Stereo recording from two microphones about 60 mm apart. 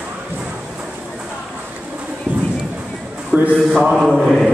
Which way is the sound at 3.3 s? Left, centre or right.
Centre.